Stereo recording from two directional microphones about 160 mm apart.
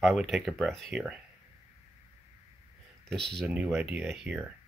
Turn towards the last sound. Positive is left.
turn(degrees=-5)  # may be behind; listen again after turning